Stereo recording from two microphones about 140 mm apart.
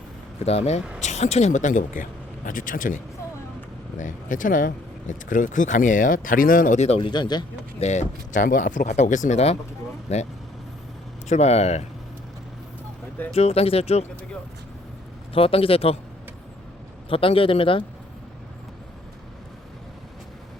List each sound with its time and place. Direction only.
0.3 s speech: 50° left (ahead or behind); by 6.7 s 80° left
6.7 s speech: 50° left (ahead or behind)
7.0 s speech: 30° left (ahead or behind)
7.8 s speech: 55° left (ahead or behind)
11.3 s speech: 50° left (ahead or behind)
13.3 s speech: 45° left (ahead or behind)
15.3 s speech: 40° left (ahead or behind)
17.1 s speech: 40° left (ahead or behind)